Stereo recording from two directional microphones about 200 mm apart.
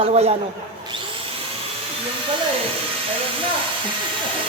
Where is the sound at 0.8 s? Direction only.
25° right (ahead or behind).